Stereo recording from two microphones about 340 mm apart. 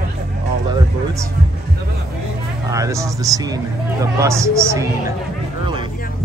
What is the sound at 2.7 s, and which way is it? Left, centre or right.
Speech, centre.